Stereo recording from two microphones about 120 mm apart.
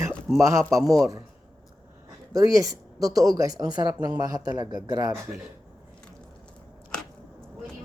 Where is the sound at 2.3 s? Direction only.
30° right (ahead or behind).